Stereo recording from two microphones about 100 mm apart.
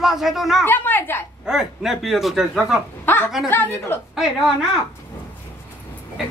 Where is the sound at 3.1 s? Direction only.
20° left (ahead or behind).